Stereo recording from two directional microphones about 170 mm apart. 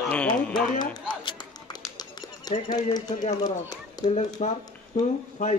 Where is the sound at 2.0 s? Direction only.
25° left (ahead or behind).